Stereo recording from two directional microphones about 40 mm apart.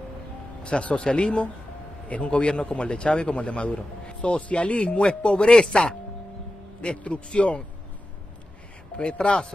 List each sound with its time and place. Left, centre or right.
0.7 s a man's voice: left
6.8 s a man's voice: left
9.2 s a man's voice: left